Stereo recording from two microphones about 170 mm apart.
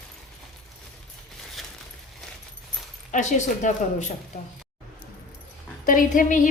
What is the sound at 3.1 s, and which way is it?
Speech, 45° left (ahead or behind).